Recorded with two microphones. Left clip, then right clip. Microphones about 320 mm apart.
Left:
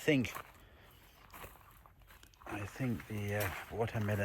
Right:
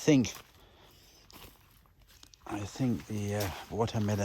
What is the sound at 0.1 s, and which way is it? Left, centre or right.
Speech, centre.